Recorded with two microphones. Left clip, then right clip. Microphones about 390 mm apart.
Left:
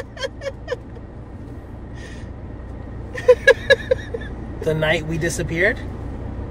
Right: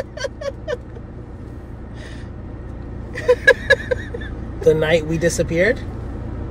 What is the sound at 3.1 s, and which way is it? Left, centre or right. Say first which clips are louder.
Vehicle: left 1 dB; centre.